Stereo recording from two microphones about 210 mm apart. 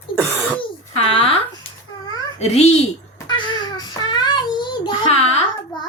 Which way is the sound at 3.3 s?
20° left (ahead or behind).